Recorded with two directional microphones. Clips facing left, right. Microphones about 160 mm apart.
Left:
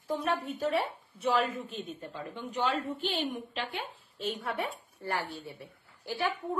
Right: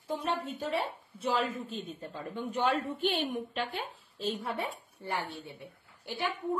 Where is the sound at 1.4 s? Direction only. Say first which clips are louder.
Left 1 dB; 35° right (ahead or behind); by 3.6 s 55° right (ahead or behind).